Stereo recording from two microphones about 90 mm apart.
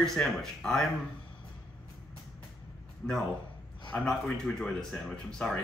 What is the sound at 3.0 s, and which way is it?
Speech, 15° left (ahead or behind).